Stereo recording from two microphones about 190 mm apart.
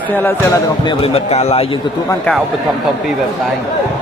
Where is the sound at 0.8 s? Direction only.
30° left (ahead or behind).